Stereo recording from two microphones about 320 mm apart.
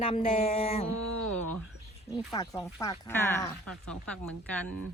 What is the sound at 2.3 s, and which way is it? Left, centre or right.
Speech, centre.